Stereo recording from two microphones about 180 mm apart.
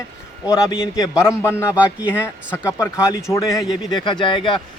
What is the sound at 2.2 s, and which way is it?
Speech, 15° left (ahead or behind).